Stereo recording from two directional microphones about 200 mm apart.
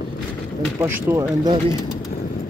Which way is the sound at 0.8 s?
10° right (ahead or behind).